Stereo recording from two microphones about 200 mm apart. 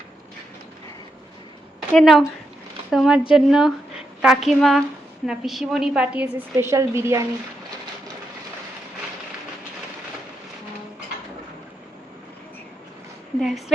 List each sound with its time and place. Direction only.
1.9 s a woman's voice: centre (ahead or behind); by 7.3 s 15° right (ahead or behind)
13.4 s a woman's voice: centre (ahead or behind)